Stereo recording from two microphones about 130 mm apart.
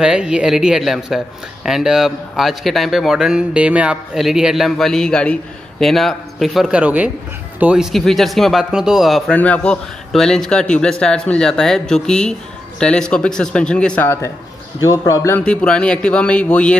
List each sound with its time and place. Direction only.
0.0 s speech: 5° right (ahead or behind)
9.3 s a man's voice: 10° left (ahead or behind)
14.0 s a man's voice: 20° left (ahead or behind)
15.3 s a man's voice: 10° left (ahead or behind)